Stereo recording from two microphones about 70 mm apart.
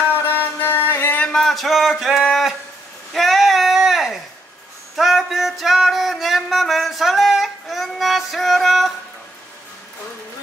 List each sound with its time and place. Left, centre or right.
0.0 s music: left
1.3 s speech: centre
3.1 s a sound: centre
4.9 s music: centre